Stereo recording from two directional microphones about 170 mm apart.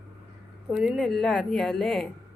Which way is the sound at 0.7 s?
5° right (ahead or behind).